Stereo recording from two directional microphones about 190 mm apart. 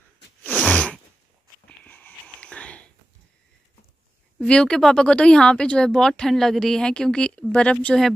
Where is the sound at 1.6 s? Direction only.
10° left (ahead or behind).